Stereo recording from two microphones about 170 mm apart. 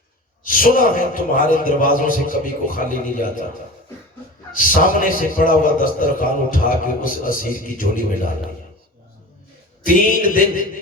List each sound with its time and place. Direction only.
0.4 s a man's voice: 55° left (ahead or behind)
4.5 s a man's voice: 55° left (ahead or behind)
9.8 s a sound: 55° left (ahead or behind)